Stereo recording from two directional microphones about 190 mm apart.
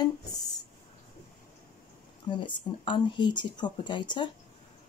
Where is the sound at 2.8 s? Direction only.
25° left (ahead or behind).